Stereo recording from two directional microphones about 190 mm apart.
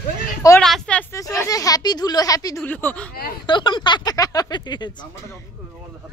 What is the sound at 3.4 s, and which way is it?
Speech, 25° left (ahead or behind).